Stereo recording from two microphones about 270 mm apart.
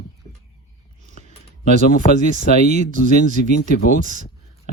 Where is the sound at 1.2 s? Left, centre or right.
Right.